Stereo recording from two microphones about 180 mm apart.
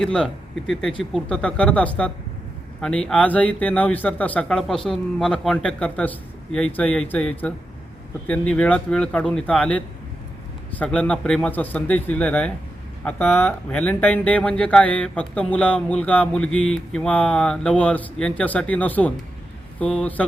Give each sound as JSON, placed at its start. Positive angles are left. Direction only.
{"t": 0.0, "sound": "a man's voice", "side_deg": 5}